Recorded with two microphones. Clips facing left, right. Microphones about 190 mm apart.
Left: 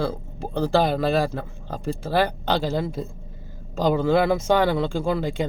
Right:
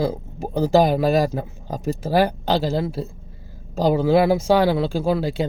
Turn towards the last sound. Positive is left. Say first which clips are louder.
# right 3 dB
turn(degrees=-5)  # may be behind; listen again after turning